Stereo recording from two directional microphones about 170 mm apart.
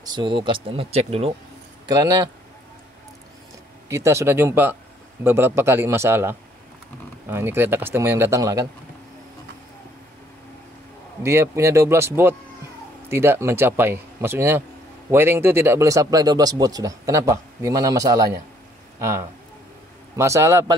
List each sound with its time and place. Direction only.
0.0 s speech: 25° right (ahead or behind)
1.9 s speech: 20° right (ahead or behind)
3.9 s speech: 15° right (ahead or behind)
11.2 s speech: 15° right (ahead or behind)